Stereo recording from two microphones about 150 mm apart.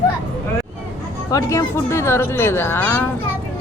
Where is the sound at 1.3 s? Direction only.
20° left (ahead or behind).